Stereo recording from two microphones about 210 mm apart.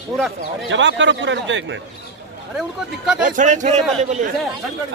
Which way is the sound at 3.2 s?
35° right (ahead or behind).